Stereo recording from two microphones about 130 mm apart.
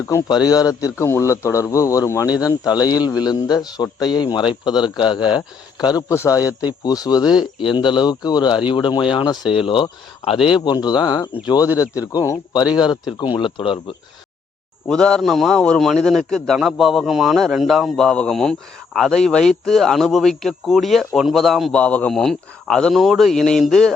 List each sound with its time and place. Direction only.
0.3 s speech: 30° left (ahead or behind)
6.4 s speech: 10° right (ahead or behind)
6.7 s speech: 30° left (ahead or behind)
14.8 s speech: 5° left (ahead or behind)